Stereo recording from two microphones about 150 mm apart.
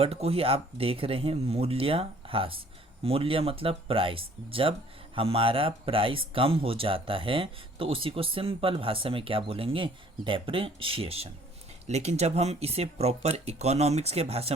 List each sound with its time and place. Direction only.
0.0 s speech: 40° right (ahead or behind)